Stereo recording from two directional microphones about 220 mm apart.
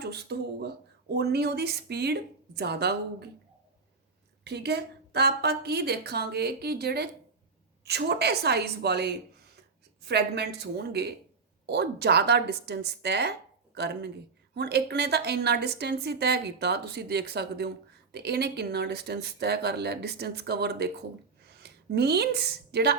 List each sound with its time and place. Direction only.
0.0 s speech: 50° right (ahead or behind)
4.4 s a woman's voice: 50° right (ahead or behind)